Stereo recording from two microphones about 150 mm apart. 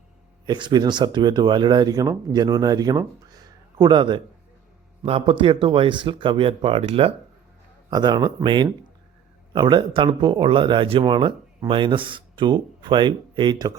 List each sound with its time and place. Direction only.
0.4 s speech: 30° right (ahead or behind)
3.2 s a sound: 25° right (ahead or behind)
5.0 s speech: 35° right (ahead or behind)
7.9 s speech: 25° right (ahead or behind)